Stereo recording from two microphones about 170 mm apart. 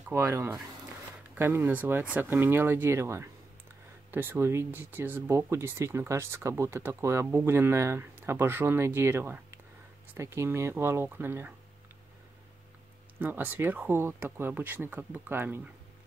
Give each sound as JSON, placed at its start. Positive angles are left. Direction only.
{"t": 0.1, "sound": "speech", "side_deg": -15}
{"t": 13.2, "sound": "speech", "side_deg": -10}